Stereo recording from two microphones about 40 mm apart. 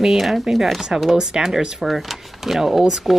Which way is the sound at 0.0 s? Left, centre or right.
Centre.